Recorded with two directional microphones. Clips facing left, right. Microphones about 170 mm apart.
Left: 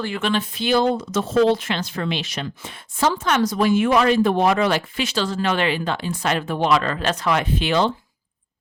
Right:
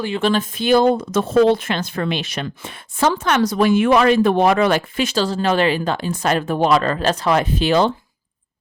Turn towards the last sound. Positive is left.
turn(degrees=-40)  # may be behind; listen again after turning